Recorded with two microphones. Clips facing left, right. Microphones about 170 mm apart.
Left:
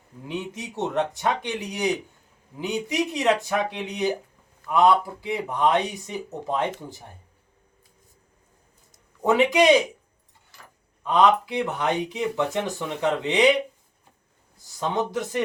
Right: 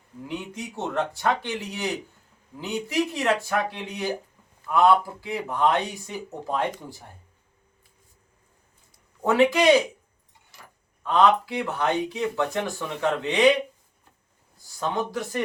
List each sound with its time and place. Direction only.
0.3 s speech: 20° left (ahead or behind)
9.2 s speech: 20° left (ahead or behind)
11.0 s speech: 20° left (ahead or behind)
14.8 s speech: 20° left (ahead or behind)